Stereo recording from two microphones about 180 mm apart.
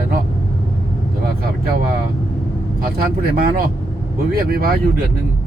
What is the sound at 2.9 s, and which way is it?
Speech, 60° right (ahead or behind).